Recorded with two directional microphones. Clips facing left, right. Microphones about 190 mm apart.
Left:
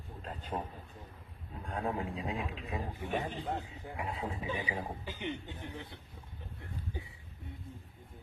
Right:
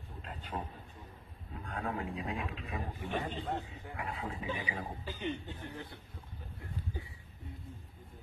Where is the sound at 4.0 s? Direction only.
30° left (ahead or behind).